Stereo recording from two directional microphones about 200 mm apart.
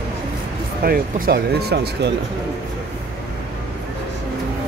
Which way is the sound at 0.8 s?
50° right (ahead or behind).